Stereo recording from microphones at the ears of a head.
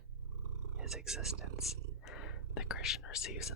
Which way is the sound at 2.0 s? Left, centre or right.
Left.